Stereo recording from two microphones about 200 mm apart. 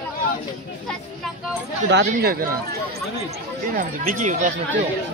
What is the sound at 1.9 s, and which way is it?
Speech, 55° right (ahead or behind).